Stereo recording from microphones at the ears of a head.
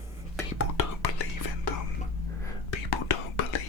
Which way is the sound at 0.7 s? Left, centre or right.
Left.